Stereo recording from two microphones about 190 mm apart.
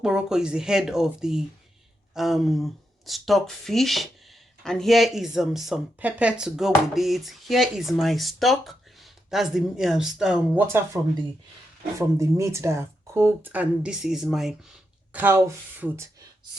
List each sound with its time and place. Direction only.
0.0 s speech: 5° right (ahead or behind)